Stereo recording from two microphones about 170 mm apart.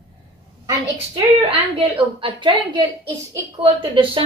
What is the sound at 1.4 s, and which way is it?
A woman's voice, 30° right (ahead or behind).